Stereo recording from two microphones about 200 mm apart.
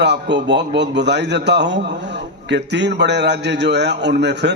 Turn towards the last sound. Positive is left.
turn(degrees=-60)  # may be behind; listen again after turning